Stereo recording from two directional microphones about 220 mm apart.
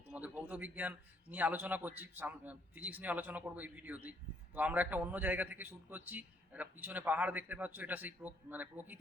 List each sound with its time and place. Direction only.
0.1 s speech: 5° right (ahead or behind)